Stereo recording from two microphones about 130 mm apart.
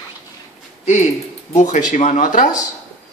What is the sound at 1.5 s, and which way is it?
Speech, 70° left (ahead or behind).